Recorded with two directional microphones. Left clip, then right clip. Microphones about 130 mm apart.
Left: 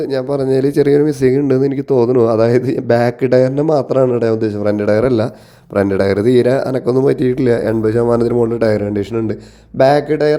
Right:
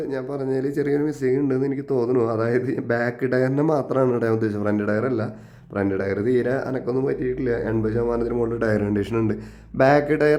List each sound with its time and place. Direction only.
0.1 s speech: 50° left (ahead or behind); by 7.5 s 65° left (ahead or behind)
7.5 s speech: 45° left (ahead or behind)
8.6 s speech: 20° left (ahead or behind)